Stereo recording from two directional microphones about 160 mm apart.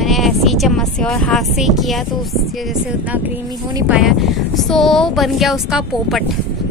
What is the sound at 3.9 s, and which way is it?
Speech, 5° right (ahead or behind).